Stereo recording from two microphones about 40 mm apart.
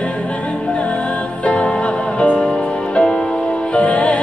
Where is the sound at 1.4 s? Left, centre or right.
Left.